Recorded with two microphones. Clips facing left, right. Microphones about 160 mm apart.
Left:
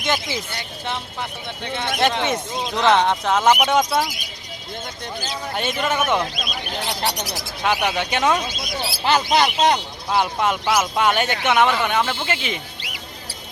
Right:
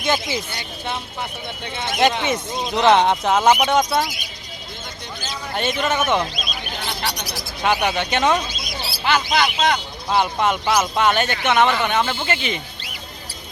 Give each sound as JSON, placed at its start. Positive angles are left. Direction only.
{"t": 0.0, "sound": "speech", "side_deg": 0}
{"t": 2.0, "sound": "speech", "side_deg": -5}
{"t": 3.6, "sound": "speech", "side_deg": 5}
{"t": 5.5, "sound": "speech", "side_deg": 0}
{"t": 6.3, "sound": "speech", "side_deg": 55}
{"t": 7.6, "sound": "speech", "side_deg": 0}
{"t": 9.0, "sound": "speech", "side_deg": 35}
{"t": 10.1, "sound": "speech", "side_deg": 5}
{"t": 11.7, "sound": "speech", "side_deg": 0}